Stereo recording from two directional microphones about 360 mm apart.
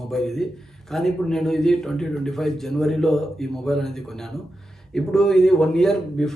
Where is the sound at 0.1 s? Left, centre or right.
Centre.